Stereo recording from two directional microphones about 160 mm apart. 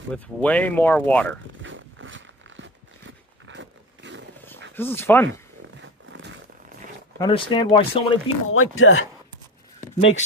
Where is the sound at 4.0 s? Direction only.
90° right.